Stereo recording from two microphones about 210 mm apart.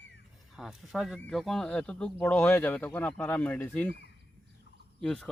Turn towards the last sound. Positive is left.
turn(degrees=0)  # may be behind; listen again after turning